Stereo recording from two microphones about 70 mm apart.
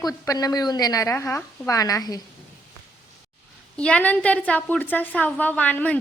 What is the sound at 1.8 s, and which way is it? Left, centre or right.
Speech, left.